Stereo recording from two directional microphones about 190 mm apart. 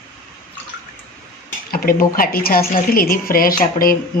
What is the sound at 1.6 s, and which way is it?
Speech, 50° left (ahead or behind).